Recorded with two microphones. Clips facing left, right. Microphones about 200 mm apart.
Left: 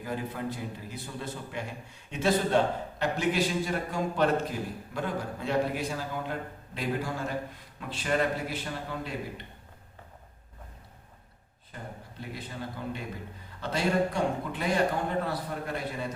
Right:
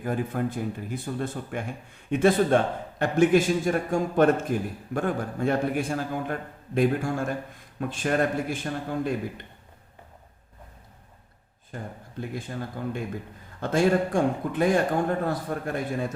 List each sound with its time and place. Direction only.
0.0 s speech: 50° right (ahead or behind)
11.7 s speech: 45° right (ahead or behind)